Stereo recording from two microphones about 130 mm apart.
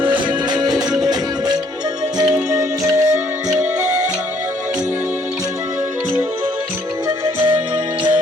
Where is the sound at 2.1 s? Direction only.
25° right (ahead or behind).